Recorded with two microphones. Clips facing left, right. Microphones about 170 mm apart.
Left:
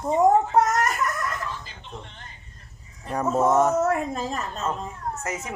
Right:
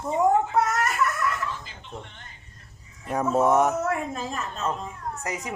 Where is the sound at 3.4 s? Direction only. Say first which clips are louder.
Left 2 dB; 15° right (ahead or behind).